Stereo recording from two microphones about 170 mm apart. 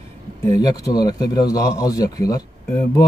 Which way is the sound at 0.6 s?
20° left (ahead or behind).